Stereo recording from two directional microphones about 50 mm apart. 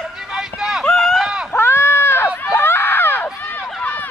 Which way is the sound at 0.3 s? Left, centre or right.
Centre.